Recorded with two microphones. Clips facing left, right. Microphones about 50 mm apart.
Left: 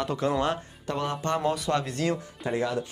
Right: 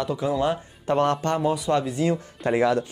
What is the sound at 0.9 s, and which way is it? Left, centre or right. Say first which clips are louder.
Speech: right 9 dB; right.